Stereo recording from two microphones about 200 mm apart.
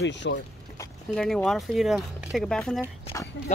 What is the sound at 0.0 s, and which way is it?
Speech, 65° left (ahead or behind).